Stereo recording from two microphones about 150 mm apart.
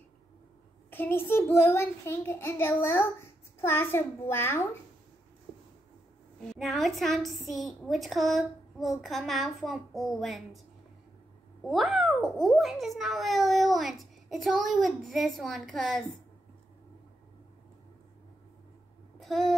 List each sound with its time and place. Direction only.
0.8 s a child's voice: 15° left (ahead or behind)
6.4 s a child's voice: centre (ahead or behind)
11.6 s a child's voice: centre (ahead or behind)
19.1 s a sound: centre (ahead or behind)